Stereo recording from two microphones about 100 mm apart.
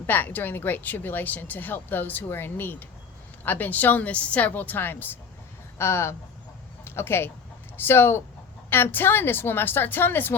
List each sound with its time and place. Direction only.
0.1 s a woman's voice: 20° left (ahead or behind)